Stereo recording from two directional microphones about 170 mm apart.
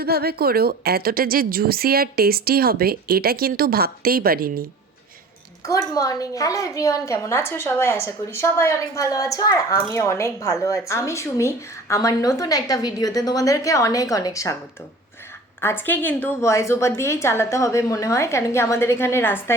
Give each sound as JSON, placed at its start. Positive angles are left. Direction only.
{"t": 0.0, "sound": "a woman's voice", "side_deg": -65}
{"t": 5.6, "sound": "a woman's voice", "side_deg": 20}
{"t": 15.6, "sound": "a woman's voice", "side_deg": 10}